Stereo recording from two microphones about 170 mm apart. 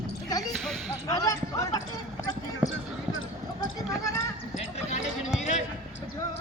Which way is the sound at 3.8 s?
20° left (ahead or behind).